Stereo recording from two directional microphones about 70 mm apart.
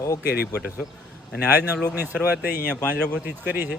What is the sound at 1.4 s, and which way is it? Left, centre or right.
Speech, right.